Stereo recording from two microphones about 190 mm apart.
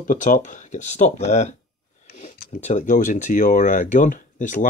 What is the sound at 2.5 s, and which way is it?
Speech, 35° left (ahead or behind).